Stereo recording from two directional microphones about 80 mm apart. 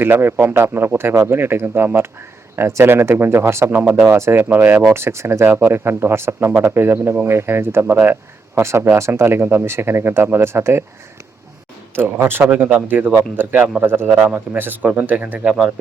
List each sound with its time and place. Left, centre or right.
0.0 s speech: right
8.5 s speech: right
11.9 s speech: right
12.5 s speech: centre
14.1 s a man's voice: centre
14.3 s speech: right
15.4 s a man's voice: centre